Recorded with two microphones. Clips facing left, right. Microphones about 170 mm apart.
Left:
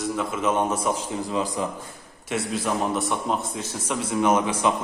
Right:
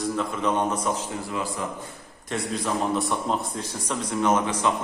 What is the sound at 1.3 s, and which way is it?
Speech, 20° left (ahead or behind).